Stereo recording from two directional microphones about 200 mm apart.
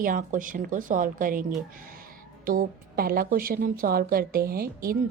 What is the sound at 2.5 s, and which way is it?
A woman's voice, 50° right (ahead or behind).